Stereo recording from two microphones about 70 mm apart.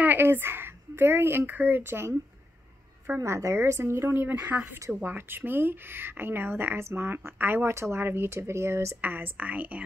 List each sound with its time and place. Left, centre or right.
0.0 s speech: right
3.2 s a woman's voice: right
9.0 s speech: right